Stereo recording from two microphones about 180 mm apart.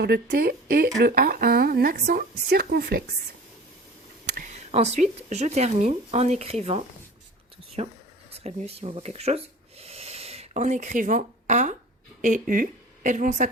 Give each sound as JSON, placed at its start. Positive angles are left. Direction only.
{"t": 0.0, "sound": "a woman's voice", "side_deg": -60}
{"t": 4.4, "sound": "a woman's voice", "side_deg": -40}